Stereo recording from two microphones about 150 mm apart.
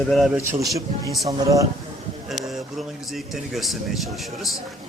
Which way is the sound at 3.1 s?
Centre (ahead or behind).